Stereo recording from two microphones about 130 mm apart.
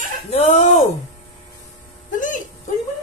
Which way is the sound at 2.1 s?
85° left.